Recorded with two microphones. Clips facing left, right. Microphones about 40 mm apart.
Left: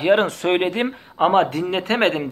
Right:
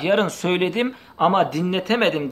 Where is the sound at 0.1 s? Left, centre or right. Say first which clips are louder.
Left 3 dB; centre.